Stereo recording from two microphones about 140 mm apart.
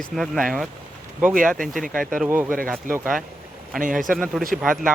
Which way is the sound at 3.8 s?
70° right (ahead or behind).